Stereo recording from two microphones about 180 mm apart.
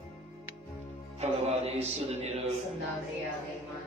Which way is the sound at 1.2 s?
35° right (ahead or behind).